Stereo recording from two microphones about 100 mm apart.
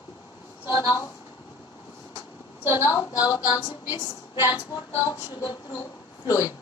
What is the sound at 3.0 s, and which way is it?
A woman's voice, 40° left (ahead or behind).